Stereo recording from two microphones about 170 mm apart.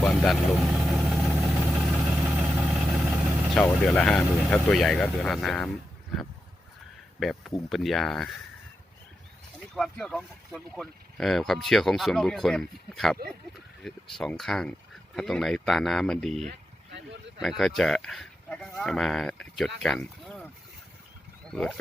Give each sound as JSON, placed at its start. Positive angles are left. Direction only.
{"t": 0.0, "sound": "vehicle", "side_deg": 0}
{"t": 3.6, "sound": "speech", "side_deg": 5}
{"t": 9.7, "sound": "speech", "side_deg": 5}
{"t": 16.5, "sound": "a sound", "side_deg": -90}
{"t": 17.4, "sound": "speech", "side_deg": 0}